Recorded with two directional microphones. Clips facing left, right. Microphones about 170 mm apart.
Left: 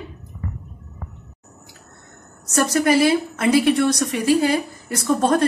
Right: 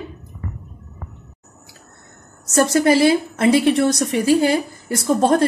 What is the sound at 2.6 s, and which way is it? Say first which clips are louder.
A woman's voice: right 2 dB; 30° right (ahead or behind).